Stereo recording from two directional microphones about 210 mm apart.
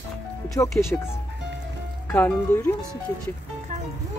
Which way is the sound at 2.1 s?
10° left (ahead or behind).